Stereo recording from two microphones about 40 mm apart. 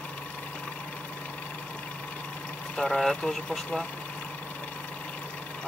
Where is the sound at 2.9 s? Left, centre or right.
Centre.